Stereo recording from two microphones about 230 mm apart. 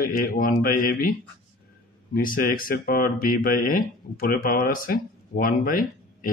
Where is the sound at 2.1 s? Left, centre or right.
Left.